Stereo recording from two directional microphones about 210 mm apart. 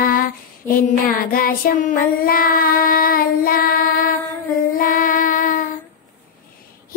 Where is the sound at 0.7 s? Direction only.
45° left (ahead or behind).